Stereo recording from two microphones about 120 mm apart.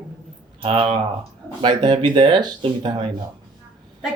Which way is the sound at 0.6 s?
45° right (ahead or behind).